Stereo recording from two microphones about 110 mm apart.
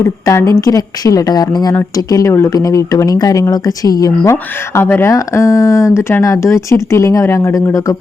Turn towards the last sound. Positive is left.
turn(degrees=30)  # may be behind; listen again after turning